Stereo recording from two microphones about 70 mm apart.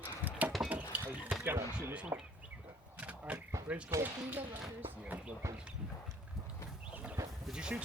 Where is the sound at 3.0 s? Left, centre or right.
Centre.